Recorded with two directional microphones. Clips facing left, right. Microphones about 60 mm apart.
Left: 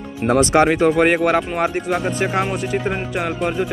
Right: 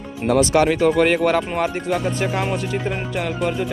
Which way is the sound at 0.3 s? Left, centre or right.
Left.